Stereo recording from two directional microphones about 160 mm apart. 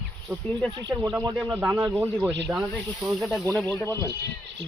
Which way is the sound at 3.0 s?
Centre (ahead or behind).